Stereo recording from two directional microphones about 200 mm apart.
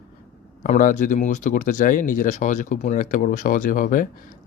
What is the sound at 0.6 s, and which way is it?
Speech, 40° left (ahead or behind).